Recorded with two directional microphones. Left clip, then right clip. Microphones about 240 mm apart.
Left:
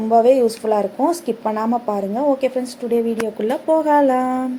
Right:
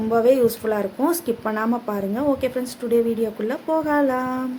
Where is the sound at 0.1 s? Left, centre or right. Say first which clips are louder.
Left 4 dB; centre.